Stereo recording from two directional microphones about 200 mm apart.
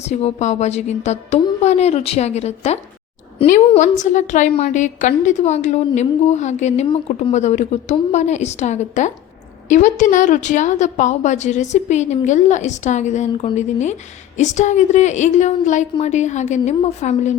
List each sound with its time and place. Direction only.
0.1 s a woman's voice: 35° left (ahead or behind)